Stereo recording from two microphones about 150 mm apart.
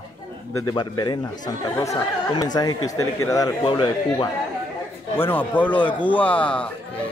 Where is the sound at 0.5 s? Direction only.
30° left (ahead or behind).